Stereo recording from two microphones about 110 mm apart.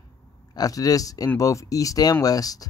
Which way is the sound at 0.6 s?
35° left (ahead or behind).